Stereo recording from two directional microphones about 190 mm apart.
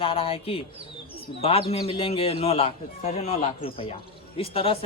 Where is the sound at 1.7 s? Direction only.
30° left (ahead or behind).